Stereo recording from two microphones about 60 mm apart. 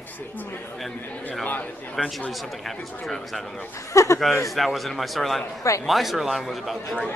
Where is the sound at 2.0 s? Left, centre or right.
Centre.